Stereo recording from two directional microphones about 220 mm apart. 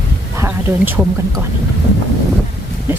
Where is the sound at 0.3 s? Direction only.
10° right (ahead or behind).